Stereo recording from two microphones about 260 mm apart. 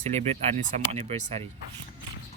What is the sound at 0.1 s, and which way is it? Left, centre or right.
Speech, right.